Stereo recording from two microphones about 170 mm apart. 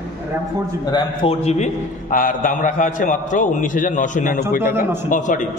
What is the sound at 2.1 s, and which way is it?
A man's voice, 50° left (ahead or behind).